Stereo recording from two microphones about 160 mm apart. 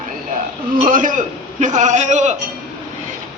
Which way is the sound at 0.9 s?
55° right (ahead or behind).